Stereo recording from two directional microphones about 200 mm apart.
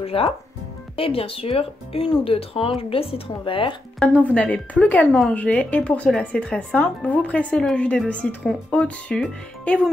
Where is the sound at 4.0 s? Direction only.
5° left (ahead or behind).